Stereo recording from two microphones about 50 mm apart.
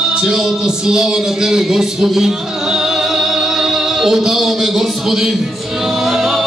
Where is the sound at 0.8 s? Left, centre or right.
Centre.